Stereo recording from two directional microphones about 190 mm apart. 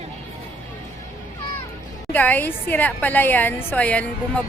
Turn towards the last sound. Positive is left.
turn(degrees=5)  # may be behind; listen again after turning